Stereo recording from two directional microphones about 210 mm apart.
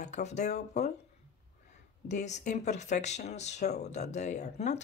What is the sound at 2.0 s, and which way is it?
Speech, 35° left (ahead or behind).